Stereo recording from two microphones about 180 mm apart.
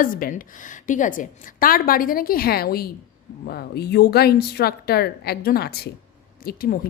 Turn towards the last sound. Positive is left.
turn(degrees=55)  # may be behind; listen again after turning